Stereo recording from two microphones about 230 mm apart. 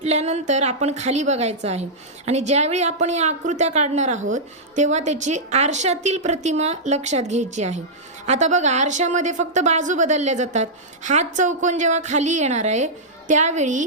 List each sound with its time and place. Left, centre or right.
0.0 s a woman's voice: right